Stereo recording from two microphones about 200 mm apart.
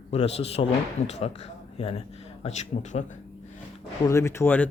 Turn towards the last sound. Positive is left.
turn(degrees=10)  # may be behind; listen again after turning